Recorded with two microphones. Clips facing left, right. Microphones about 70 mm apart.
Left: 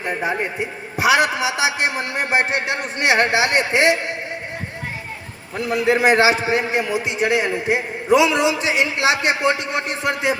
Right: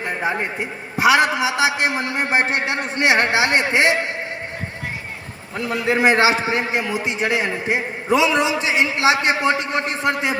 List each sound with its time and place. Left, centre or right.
0.0 s a man's voice: right
5.9 s a man's voice: right